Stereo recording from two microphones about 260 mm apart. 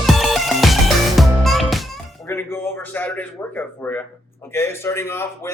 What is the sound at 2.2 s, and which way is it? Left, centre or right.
A man's voice, centre.